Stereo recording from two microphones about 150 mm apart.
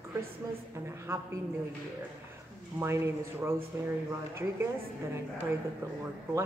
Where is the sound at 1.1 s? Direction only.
15° right (ahead or behind).